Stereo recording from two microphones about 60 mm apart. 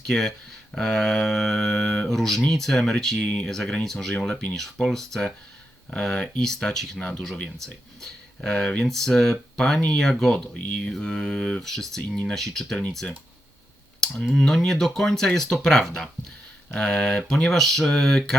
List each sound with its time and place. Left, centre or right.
0.1 s speech: centre
3.5 s speech: centre
14.0 s speech: centre